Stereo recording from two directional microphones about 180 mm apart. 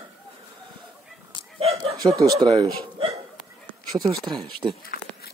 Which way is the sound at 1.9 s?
20° right (ahead or behind).